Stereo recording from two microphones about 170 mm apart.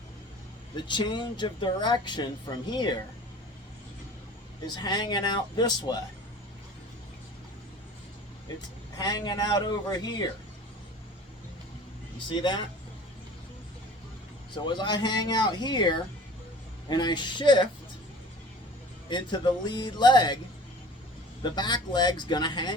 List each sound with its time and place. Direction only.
0.8 s speech: 25° left (ahead or behind)
4.6 s speech: 25° left (ahead or behind)
9.0 s speech: 25° left (ahead or behind)
12.3 s speech: 30° left (ahead or behind)
14.5 s speech: 25° left (ahead or behind)
19.0 s speech: 25° left (ahead or behind)
21.4 s speech: 25° left (ahead or behind)